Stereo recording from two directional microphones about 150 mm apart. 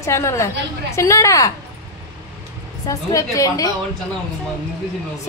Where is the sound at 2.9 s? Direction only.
20° left (ahead or behind).